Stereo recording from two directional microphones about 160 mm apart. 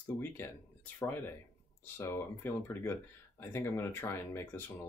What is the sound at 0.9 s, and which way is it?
Speech, 15° left (ahead or behind).